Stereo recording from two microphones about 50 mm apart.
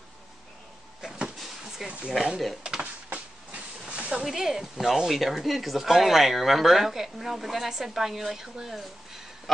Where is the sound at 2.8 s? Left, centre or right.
Right.